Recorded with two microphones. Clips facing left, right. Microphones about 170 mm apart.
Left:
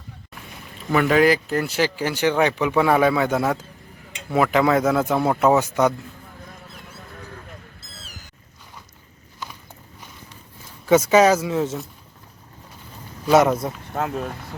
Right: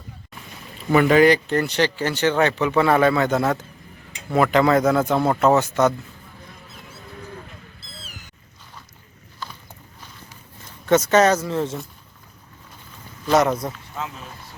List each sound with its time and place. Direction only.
0.9 s speech: centre (ahead or behind)
10.8 s speech: 5° left (ahead or behind)
13.2 s speech: 5° left (ahead or behind)
13.9 s speech: 55° left (ahead or behind)